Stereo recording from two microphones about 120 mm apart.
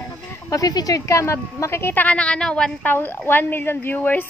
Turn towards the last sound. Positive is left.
turn(degrees=15)  # may be behind; listen again after turning